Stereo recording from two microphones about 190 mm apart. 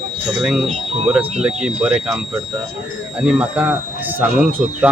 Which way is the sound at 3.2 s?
5° right (ahead or behind).